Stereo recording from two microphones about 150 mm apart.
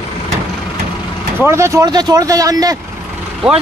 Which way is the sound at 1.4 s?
20° right (ahead or behind).